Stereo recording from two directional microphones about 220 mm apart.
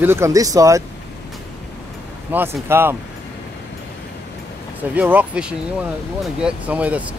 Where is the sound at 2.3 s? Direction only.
10° right (ahead or behind).